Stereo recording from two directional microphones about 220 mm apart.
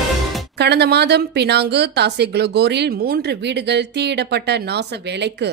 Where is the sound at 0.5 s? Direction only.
50° right (ahead or behind).